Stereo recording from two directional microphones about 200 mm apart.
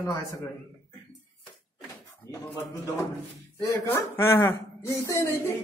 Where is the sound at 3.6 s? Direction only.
10° left (ahead or behind).